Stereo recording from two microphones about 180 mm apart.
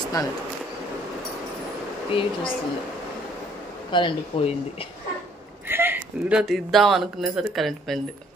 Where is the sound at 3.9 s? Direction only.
30° left (ahead or behind).